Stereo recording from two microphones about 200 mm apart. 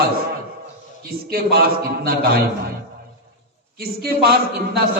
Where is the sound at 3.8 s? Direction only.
50° right (ahead or behind).